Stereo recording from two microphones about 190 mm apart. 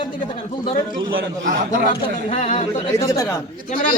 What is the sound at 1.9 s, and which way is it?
Speech, 30° left (ahead or behind).